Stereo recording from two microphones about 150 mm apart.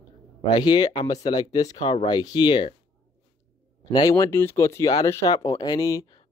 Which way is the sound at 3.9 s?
30° left (ahead or behind).